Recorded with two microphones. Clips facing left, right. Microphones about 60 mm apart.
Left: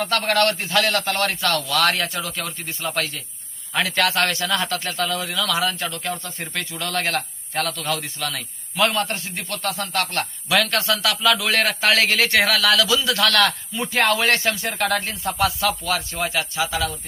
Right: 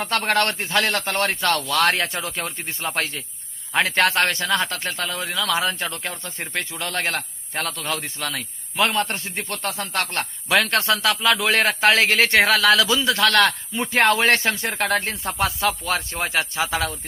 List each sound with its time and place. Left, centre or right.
0.0 s a man's voice: right
8.4 s a man's voice: centre; by 16.9 s right